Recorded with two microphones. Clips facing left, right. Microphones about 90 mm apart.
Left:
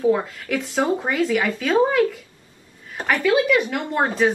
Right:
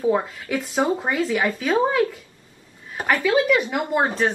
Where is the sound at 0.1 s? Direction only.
5° right (ahead or behind).